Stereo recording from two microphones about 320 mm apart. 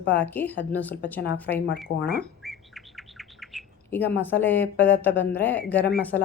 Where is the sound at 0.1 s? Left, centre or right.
Centre.